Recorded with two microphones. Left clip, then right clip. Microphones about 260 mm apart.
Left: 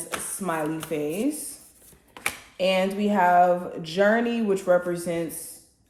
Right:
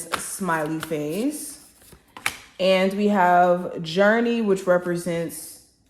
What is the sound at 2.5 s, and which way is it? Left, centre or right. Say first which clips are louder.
Speech: right 4 dB; right.